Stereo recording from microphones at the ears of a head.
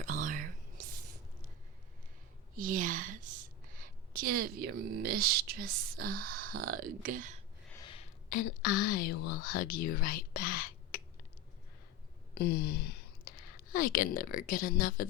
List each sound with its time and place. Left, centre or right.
0.0 s whispering: right
2.6 s a woman's voice: right
7.7 s speech: left
12.3 s speech: left